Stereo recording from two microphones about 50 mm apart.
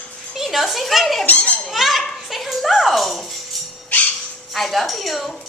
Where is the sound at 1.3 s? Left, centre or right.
Left.